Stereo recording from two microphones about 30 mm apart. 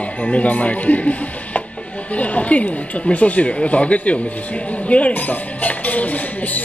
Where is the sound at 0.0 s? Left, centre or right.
Left.